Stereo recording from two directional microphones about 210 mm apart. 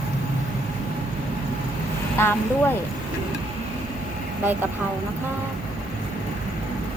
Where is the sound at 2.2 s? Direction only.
10° left (ahead or behind).